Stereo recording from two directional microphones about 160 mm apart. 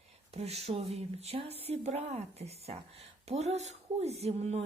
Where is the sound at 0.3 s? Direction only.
40° right (ahead or behind).